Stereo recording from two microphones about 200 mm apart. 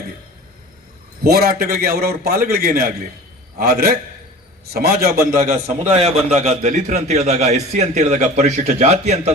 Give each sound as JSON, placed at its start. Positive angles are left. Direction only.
{"t": 1.2, "sound": "a man's voice", "side_deg": -50}
{"t": 5.4, "sound": "a man's voice", "side_deg": -35}